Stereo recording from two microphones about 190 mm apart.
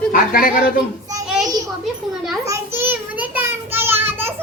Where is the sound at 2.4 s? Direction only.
15° right (ahead or behind).